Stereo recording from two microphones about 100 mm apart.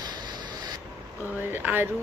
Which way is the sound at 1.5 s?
20° right (ahead or behind).